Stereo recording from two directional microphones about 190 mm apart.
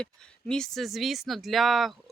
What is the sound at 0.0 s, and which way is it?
Speech, 5° left (ahead or behind).